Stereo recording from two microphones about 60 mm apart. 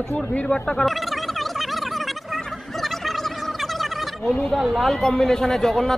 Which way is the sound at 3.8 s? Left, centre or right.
Centre.